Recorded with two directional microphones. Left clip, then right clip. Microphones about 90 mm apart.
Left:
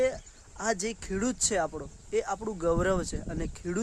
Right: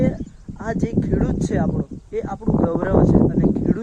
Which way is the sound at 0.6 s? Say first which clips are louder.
Right 6 dB; 25° left (ahead or behind).